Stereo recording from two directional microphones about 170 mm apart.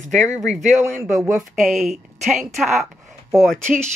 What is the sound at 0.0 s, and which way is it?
Speech, 45° right (ahead or behind).